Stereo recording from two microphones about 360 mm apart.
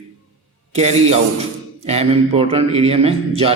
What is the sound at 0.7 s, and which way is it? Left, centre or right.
A man's voice, centre.